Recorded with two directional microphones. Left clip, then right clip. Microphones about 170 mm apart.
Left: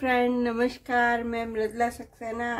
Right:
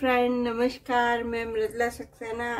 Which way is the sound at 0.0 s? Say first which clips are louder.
Even; 10° left (ahead or behind).